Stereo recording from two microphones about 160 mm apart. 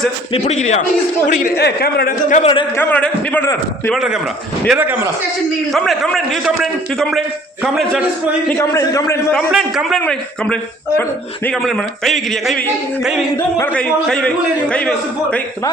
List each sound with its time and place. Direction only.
0.3 s a man's voice: 45° left (ahead or behind)
1.3 s a man's voice: 55° left (ahead or behind)
1.5 s a man's voice: 80° left
2.4 s a man's voice: 35° left (ahead or behind)
2.7 s a man's voice: 10° left (ahead or behind)
3.9 s speech: 5° right (ahead or behind)
5.7 s speech: centre (ahead or behind)
8.4 s a man's voice: 20° left (ahead or behind)
9.5 s a man's voice: centre (ahead or behind)